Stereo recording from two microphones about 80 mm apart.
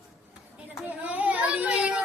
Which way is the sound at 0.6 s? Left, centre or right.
Centre.